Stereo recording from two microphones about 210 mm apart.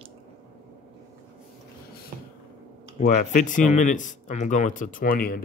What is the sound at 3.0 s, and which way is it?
A man's voice, 35° left (ahead or behind).